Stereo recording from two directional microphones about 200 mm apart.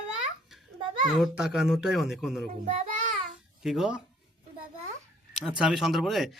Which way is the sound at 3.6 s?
Centre (ahead or behind).